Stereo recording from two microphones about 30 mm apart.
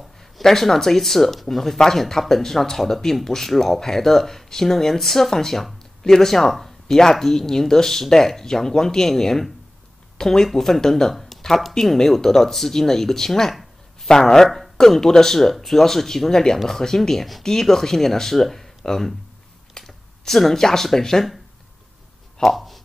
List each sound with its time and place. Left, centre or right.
0.4 s speech: centre
14.1 s speech: left
22.4 s speech: centre